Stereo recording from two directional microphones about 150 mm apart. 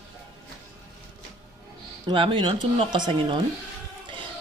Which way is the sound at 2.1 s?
35° right (ahead or behind).